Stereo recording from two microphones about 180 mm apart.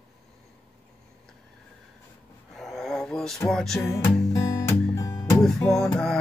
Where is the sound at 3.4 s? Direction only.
Centre (ahead or behind).